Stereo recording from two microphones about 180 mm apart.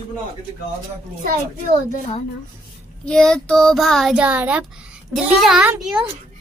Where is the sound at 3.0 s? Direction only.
5° left (ahead or behind).